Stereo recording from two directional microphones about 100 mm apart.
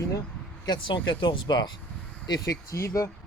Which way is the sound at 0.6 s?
50° left (ahead or behind).